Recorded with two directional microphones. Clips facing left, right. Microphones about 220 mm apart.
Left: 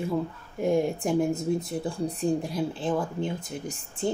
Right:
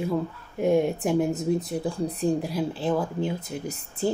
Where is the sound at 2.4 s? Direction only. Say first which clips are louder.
Right 2 dB; 5° right (ahead or behind).